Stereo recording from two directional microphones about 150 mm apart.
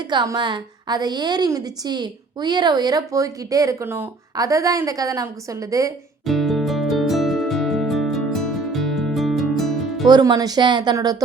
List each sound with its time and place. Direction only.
0.1 s a woman's voice: 30° right (ahead or behind)
6.2 s music: centre (ahead or behind)
10.1 s a woman's voice: 25° right (ahead or behind)